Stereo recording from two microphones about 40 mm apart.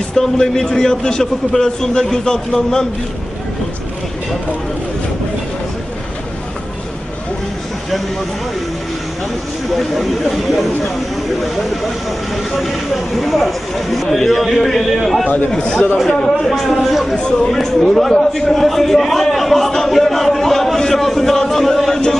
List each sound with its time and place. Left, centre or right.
0.1 s a man's voice: centre
9.8 s a man's voice: centre
12.5 s a man's voice: centre
15.5 s a man's voice: centre
16.4 s a man's voice: centre
17.1 s speech: left
17.4 s a man's voice: centre